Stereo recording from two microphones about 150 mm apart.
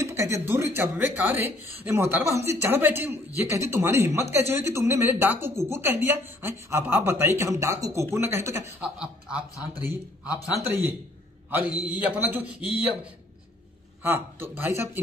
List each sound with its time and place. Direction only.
0.0 s speech: 20° right (ahead or behind)
10.6 s speech: 15° right (ahead or behind)
14.0 s speech: 15° right (ahead or behind)